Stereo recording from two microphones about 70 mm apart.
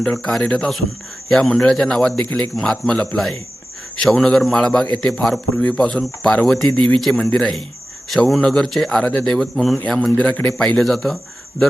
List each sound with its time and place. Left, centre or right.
0.0 s a man's voice: centre